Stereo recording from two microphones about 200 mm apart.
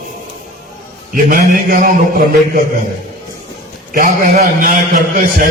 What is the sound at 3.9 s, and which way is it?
A man's voice, 45° right (ahead or behind).